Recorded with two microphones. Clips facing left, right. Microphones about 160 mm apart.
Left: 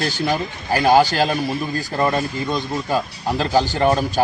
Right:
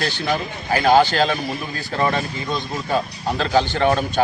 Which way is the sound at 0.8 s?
10° left (ahead or behind).